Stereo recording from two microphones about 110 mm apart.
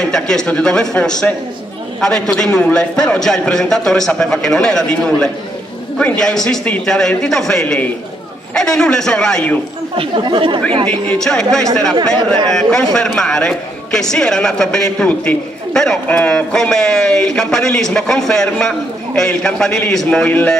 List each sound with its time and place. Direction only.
0.1 s a man's voice: 5° left (ahead or behind)
9.9 s speech: 50° right (ahead or behind)
10.9 s a man's voice: 10° left (ahead or behind)